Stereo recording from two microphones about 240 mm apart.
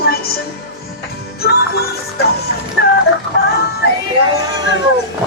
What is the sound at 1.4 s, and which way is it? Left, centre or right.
Music, left.